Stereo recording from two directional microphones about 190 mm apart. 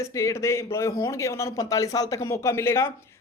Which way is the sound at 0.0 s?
15° left (ahead or behind).